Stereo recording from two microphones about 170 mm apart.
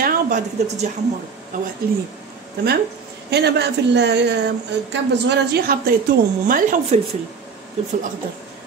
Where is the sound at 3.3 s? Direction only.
80° right.